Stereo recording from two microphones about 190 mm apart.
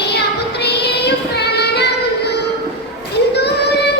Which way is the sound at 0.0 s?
60° left (ahead or behind).